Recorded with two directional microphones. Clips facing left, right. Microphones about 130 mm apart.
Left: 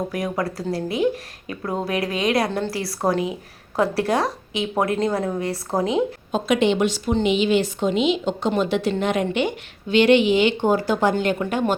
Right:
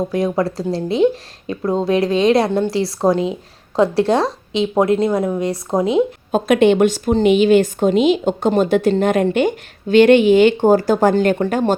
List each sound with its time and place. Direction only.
0.1 s speech: 25° right (ahead or behind)
6.3 s a woman's voice: 50° right (ahead or behind); by 11.7 s 35° right (ahead or behind)